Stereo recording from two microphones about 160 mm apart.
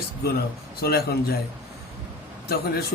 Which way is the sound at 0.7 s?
80° left.